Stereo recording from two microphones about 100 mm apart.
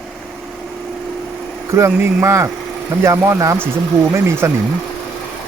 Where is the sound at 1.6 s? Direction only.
30° right (ahead or behind).